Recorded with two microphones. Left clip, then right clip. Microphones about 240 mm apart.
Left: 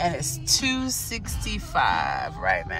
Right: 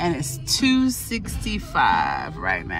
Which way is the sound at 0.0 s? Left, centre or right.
Centre.